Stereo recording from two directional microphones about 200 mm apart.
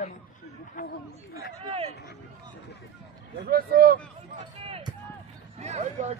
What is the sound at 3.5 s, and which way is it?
Speech, 50° right (ahead or behind).